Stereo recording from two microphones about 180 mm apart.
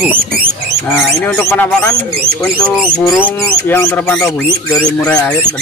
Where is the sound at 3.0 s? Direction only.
5° right (ahead or behind).